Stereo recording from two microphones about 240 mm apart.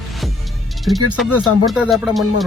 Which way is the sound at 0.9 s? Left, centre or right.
Centre.